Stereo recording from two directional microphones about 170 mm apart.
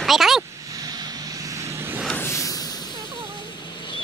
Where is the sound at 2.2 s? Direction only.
15° left (ahead or behind).